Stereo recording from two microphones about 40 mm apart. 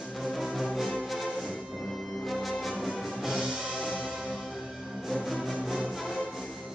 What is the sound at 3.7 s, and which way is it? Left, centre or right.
Music, centre.